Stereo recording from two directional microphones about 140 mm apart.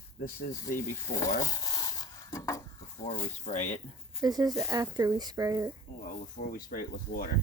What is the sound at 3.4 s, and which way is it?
Speech, 55° left (ahead or behind).